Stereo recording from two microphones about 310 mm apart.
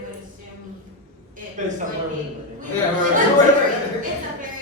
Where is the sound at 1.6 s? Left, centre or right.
Right.